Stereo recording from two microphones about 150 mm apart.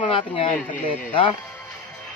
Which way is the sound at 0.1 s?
35° left (ahead or behind).